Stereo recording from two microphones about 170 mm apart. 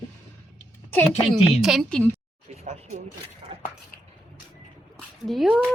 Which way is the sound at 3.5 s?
30° right (ahead or behind).